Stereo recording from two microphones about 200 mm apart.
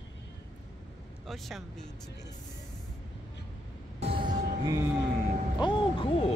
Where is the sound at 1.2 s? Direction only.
Centre (ahead or behind).